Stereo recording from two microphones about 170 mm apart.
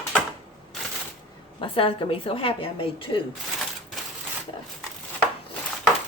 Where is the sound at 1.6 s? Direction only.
30° left (ahead or behind).